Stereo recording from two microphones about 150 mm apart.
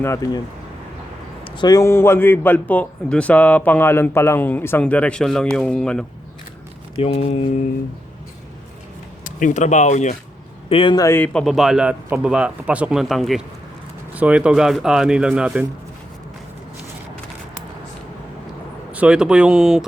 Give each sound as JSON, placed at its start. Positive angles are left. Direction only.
{"t": 0.0, "sound": "speech", "side_deg": 20}
{"t": 1.5, "sound": "a man's voice", "side_deg": 30}
{"t": 7.0, "sound": "speech", "side_deg": 45}
{"t": 9.2, "sound": "speech", "side_deg": 60}
{"t": 10.7, "sound": "speech", "side_deg": 35}
{"t": 10.9, "sound": "speech", "side_deg": 20}
{"t": 11.3, "sound": "speech", "side_deg": 0}
{"t": 18.9, "sound": "speech", "side_deg": -5}